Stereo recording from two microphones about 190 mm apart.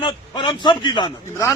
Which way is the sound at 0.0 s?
25° left (ahead or behind).